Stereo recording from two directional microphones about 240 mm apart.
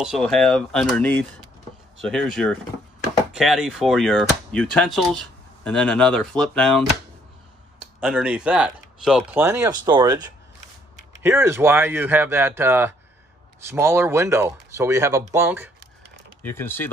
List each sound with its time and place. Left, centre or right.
0.0 s speech: centre
8.0 s speech: centre
11.2 s speech: centre
16.4 s speech: centre